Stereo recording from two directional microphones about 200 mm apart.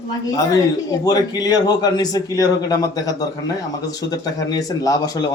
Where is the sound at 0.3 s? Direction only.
20° left (ahead or behind).